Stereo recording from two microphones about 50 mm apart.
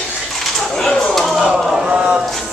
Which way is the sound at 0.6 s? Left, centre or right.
Centre.